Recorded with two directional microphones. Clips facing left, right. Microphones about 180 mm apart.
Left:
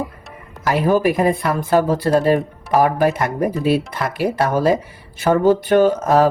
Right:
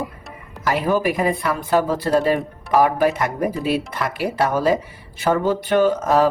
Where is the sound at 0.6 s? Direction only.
45° left (ahead or behind).